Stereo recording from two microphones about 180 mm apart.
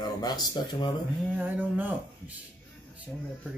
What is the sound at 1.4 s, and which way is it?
Speech, 10° right (ahead or behind).